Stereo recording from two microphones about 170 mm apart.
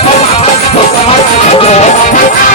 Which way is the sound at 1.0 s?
40° left (ahead or behind).